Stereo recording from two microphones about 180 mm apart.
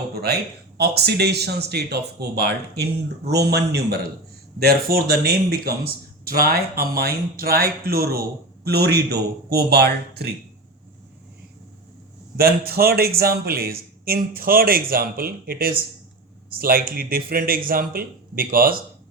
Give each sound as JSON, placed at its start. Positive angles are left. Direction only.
{"t": 0.8, "sound": "speech", "side_deg": -65}
{"t": 12.4, "sound": "speech", "side_deg": -60}